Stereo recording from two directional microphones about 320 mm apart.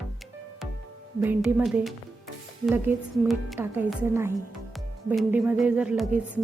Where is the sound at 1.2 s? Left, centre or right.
Centre.